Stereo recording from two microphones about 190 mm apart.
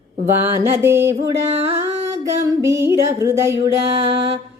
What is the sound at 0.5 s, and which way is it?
Music, 15° right (ahead or behind).